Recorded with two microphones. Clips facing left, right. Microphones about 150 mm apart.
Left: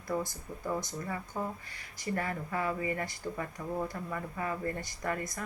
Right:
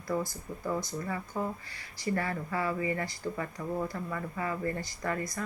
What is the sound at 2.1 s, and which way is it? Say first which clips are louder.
A woman's voice: right 1 dB; 15° left (ahead or behind).